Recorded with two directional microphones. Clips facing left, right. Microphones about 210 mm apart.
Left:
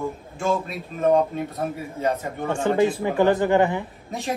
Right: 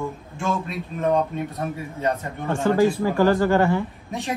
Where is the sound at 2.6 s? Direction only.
20° left (ahead or behind).